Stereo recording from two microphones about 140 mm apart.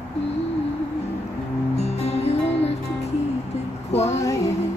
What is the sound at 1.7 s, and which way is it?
Music, 50° left (ahead or behind).